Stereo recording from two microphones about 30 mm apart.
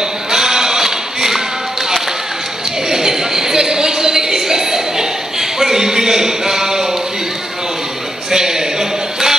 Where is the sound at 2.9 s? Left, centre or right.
Centre.